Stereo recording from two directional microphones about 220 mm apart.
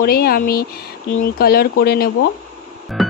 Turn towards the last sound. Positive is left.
turn(degrees=0)  # may be behind; listen again after turning